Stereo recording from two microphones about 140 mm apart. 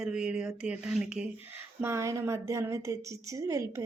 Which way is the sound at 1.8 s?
20° right (ahead or behind).